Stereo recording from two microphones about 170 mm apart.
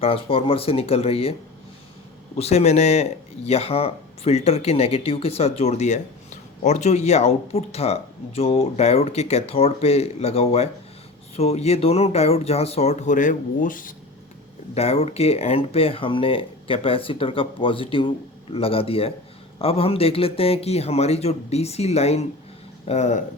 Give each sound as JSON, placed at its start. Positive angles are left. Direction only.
{"t": 0.0, "sound": "speech", "side_deg": 35}
{"t": 14.8, "sound": "speech", "side_deg": 35}